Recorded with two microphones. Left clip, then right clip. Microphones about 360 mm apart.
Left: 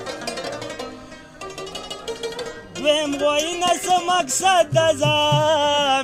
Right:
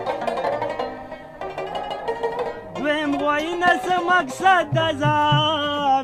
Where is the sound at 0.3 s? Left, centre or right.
Centre.